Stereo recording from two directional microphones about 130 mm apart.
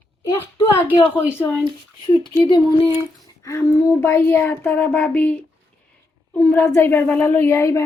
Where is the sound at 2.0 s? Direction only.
35° left (ahead or behind).